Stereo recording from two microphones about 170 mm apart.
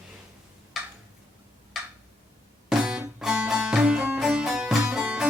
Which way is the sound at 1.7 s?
Centre (ahead or behind).